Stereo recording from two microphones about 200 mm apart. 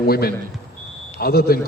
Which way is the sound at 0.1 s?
50° left (ahead or behind).